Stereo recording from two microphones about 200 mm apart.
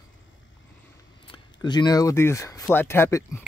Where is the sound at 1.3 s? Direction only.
20° left (ahead or behind).